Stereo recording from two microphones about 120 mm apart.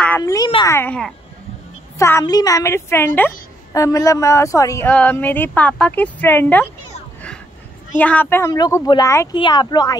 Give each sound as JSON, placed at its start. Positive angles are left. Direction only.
{"t": 0.2, "sound": "a sound", "side_deg": 30}
{"t": 0.7, "sound": "speech", "side_deg": 20}
{"t": 2.0, "sound": "speech", "side_deg": 25}
{"t": 4.8, "sound": "speech", "side_deg": 15}
{"t": 8.0, "sound": "speech", "side_deg": 15}
{"t": 8.5, "sound": "speech", "side_deg": 30}